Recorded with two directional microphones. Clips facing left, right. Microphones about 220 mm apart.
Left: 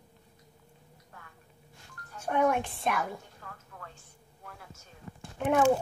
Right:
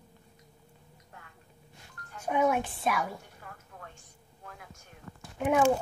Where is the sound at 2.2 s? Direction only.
10° right (ahead or behind).